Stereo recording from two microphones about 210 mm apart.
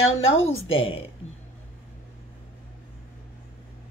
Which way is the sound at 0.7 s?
25° left (ahead or behind).